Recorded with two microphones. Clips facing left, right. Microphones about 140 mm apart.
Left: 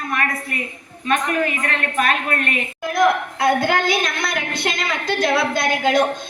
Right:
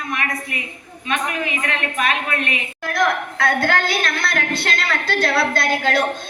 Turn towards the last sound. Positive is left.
turn(degrees=20)  # may be behind; listen again after turning